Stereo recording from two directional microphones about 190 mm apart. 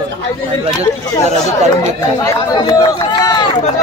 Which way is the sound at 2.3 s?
20° left (ahead or behind).